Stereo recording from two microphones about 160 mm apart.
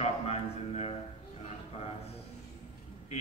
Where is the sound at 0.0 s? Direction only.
40° left (ahead or behind).